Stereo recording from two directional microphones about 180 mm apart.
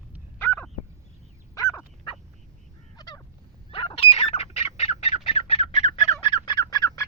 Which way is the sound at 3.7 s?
30° left (ahead or behind).